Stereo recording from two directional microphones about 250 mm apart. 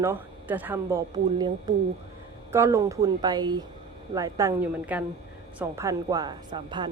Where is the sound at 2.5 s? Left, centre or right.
Centre.